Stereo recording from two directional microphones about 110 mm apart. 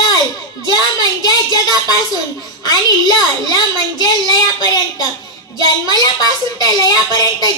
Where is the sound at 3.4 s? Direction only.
35° left (ahead or behind).